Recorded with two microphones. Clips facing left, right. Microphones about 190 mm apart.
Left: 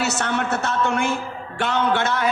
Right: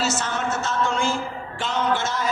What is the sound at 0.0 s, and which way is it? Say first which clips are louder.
A man's voice: left 2 dB; 65° left (ahead or behind).